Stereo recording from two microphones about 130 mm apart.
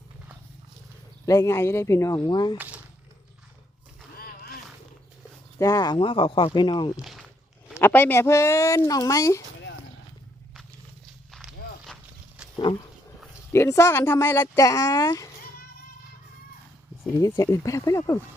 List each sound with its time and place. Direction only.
1.2 s speech: 25° left (ahead or behind)
2.2 s speech: 35° left (ahead or behind)
2.6 s a sound: 10° right (ahead or behind)
5.5 s speech: 25° left (ahead or behind)
6.0 s speech: 40° left (ahead or behind)
6.9 s speech: centre (ahead or behind)
7.8 s speech: 15° left (ahead or behind)
12.7 s speech: 40° left (ahead or behind)
13.5 s speech: 20° left (ahead or behind)
17.2 s speech: 25° left (ahead or behind)